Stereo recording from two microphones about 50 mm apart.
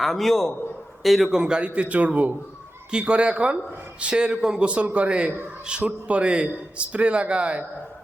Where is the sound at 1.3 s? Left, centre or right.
Centre.